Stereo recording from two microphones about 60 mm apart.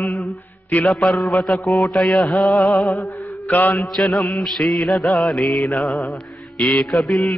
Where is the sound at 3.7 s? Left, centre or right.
Centre.